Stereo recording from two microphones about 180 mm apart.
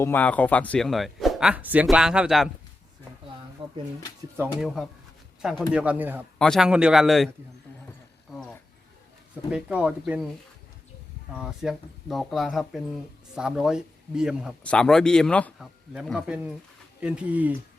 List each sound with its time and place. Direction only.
0.0 s speech: 10° left (ahead or behind)
3.6 s a sound: 30° right (ahead or behind)
4.6 s speech: centre (ahead or behind)
6.4 s speech: centre (ahead or behind)
8.3 s a sound: centre (ahead or behind)
9.5 s speech: 5° right (ahead or behind)
11.3 s speech: centre (ahead or behind)